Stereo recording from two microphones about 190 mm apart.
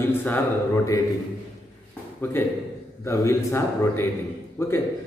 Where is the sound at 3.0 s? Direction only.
15° left (ahead or behind).